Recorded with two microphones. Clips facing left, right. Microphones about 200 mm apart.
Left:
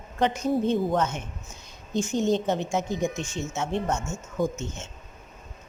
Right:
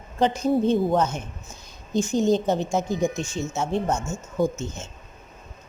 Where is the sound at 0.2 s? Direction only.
30° right (ahead or behind).